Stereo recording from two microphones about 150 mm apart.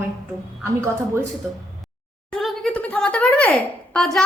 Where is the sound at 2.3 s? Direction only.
5° left (ahead or behind).